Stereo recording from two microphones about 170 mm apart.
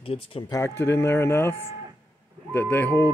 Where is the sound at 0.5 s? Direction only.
15° left (ahead or behind).